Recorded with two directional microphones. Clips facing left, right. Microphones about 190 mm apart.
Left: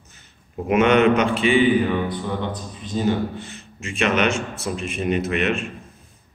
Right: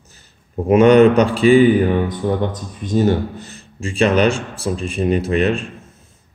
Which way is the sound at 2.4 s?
50° right (ahead or behind).